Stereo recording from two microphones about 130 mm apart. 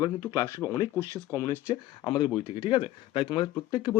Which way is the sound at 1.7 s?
35° left (ahead or behind).